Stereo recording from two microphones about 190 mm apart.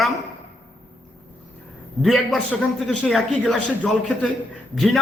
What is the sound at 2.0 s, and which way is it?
A man's voice, centre (ahead or behind).